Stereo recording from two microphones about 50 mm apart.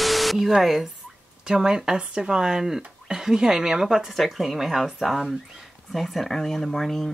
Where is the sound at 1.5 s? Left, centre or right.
Centre.